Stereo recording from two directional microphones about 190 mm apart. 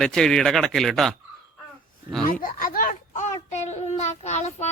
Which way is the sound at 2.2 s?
45° left (ahead or behind).